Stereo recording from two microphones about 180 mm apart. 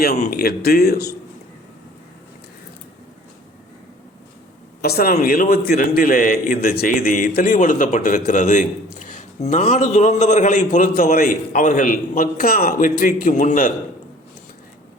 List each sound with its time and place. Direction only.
0.0 s speech: 55° left (ahead or behind)
4.8 s a man's voice: 60° left (ahead or behind)